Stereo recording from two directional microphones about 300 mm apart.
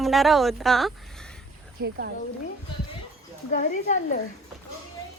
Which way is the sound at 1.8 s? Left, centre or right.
Right.